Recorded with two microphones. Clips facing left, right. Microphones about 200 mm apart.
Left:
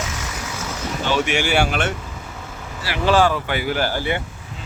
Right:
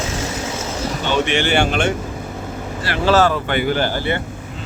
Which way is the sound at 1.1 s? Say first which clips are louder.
Right 2 dB; 10° left (ahead or behind).